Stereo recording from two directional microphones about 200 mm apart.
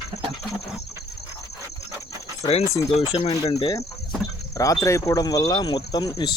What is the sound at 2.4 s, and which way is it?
Speech, 30° left (ahead or behind).